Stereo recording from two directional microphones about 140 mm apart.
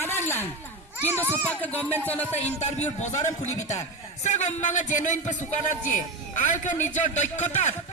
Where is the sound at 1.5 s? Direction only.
10° left (ahead or behind).